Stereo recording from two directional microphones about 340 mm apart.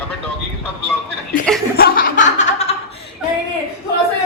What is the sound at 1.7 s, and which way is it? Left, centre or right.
Chuckle, left.